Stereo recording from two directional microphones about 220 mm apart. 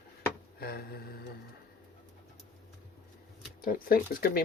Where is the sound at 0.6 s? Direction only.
45° left (ahead or behind).